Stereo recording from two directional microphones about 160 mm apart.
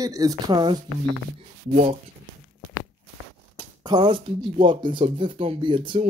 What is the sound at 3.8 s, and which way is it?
Speech, 25° right (ahead or behind).